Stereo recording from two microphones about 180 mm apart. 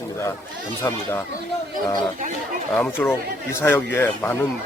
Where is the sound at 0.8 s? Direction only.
15° left (ahead or behind).